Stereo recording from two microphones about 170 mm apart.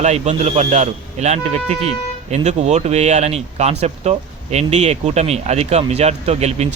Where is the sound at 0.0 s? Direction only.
40° right (ahead or behind).